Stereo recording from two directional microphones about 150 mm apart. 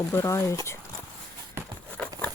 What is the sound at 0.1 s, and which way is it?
Speech, 20° left (ahead or behind).